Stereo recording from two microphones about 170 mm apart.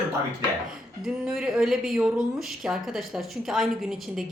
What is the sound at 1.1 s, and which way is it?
Speech, 5° right (ahead or behind).